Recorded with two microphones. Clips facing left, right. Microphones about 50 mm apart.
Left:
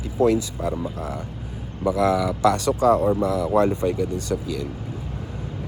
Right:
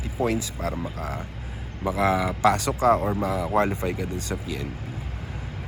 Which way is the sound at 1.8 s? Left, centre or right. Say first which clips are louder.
Left 3 dB; centre.